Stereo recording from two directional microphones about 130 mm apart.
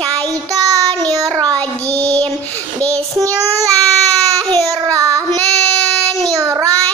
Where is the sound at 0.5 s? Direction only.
30° right (ahead or behind).